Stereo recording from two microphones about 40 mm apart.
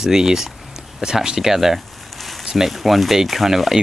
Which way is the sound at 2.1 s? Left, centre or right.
Centre.